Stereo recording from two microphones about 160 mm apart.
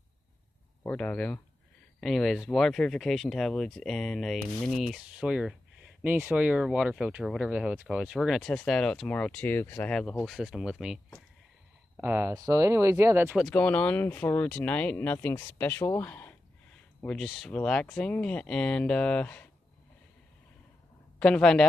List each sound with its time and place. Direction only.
0.8 s speech: 10° left (ahead or behind)
12.0 s speech: 10° right (ahead or behind)
13.4 s speech: 5° left (ahead or behind)
21.2 s speech: 5° left (ahead or behind)